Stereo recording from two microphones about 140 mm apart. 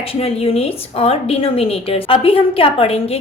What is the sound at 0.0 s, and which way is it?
A woman's voice, 45° left (ahead or behind).